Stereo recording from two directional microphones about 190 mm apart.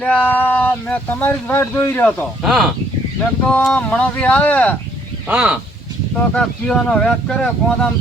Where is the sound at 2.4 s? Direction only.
5° right (ahead or behind).